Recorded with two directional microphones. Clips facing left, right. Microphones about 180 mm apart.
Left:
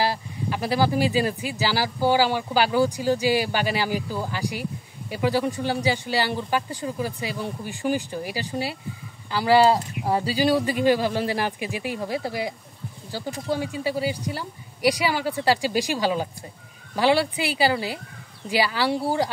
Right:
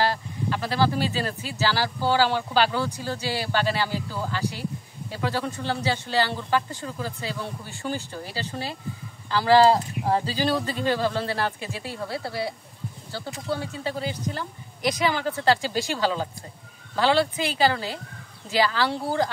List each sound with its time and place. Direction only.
0.0 s speech: 10° left (ahead or behind)